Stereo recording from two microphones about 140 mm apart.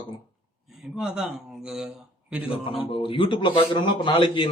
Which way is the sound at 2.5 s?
40° left (ahead or behind).